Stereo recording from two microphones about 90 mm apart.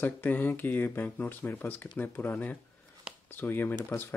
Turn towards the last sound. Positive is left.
turn(degrees=25)  # may be behind; listen again after turning